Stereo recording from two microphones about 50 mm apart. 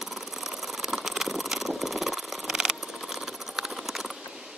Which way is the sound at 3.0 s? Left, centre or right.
Centre.